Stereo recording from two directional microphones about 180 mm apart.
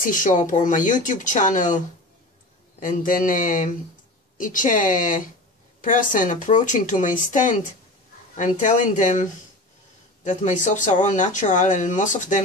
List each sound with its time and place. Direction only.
0.1 s speech: 45° left (ahead or behind)
2.8 s speech: 45° left (ahead or behind)